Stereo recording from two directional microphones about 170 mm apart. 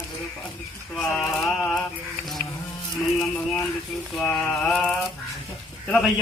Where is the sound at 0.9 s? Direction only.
5° left (ahead or behind).